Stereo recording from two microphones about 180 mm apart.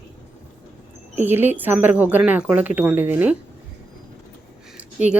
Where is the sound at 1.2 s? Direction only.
10° right (ahead or behind).